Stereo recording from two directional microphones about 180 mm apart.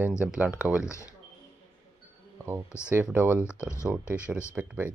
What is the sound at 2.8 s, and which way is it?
Speech, 10° right (ahead or behind).